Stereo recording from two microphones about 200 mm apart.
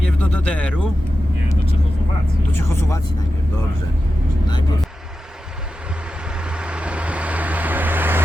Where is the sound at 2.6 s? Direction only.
15° left (ahead or behind).